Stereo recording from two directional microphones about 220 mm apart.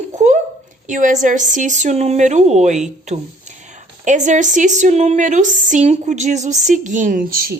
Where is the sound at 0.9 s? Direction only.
35° right (ahead or behind).